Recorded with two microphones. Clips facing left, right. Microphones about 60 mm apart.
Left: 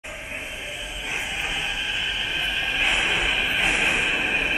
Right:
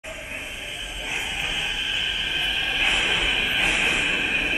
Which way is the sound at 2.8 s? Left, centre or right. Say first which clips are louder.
Left 1 dB; left.